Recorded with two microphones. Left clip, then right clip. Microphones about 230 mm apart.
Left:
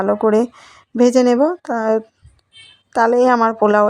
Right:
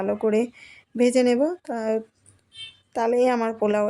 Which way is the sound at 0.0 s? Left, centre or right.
Centre.